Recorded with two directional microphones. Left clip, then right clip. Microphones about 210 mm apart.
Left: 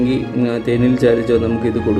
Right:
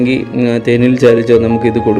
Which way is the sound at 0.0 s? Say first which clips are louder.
Right 4 dB; 25° right (ahead or behind).